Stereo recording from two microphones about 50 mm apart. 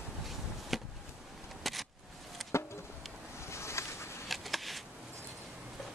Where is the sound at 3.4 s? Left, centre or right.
Left.